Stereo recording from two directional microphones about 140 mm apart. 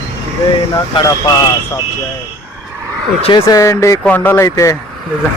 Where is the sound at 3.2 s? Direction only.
40° left (ahead or behind).